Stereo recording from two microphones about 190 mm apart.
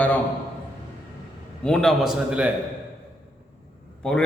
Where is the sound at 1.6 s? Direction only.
5° left (ahead or behind).